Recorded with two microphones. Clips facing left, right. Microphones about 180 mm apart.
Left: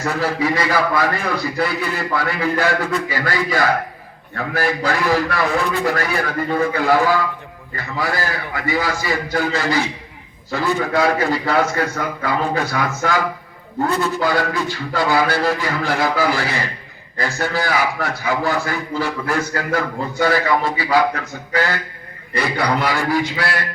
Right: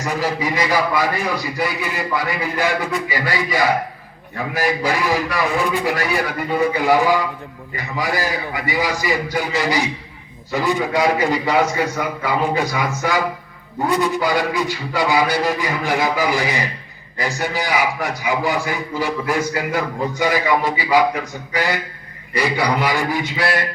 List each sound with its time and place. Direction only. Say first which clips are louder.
0.0 s a man's voice: left 2 dB; 15° right (ahead or behind)